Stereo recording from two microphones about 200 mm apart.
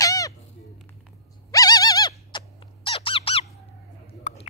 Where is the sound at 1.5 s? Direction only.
20° left (ahead or behind).